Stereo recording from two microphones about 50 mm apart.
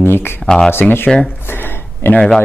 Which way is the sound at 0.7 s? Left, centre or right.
Left.